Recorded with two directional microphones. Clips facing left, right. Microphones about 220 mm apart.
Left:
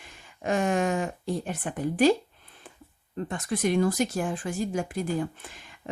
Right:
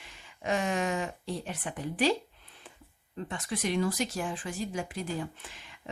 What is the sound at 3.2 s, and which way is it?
Speech, 50° left (ahead or behind).